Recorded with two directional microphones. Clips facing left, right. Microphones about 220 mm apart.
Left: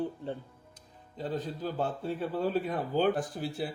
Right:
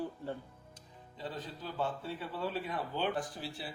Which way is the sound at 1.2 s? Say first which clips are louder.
Left 8 dB; 45° left (ahead or behind).